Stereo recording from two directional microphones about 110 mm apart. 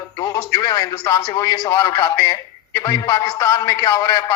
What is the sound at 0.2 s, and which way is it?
Speech, 35° left (ahead or behind).